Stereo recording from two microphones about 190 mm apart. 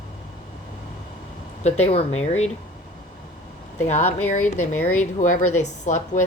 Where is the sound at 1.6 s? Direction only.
35° left (ahead or behind).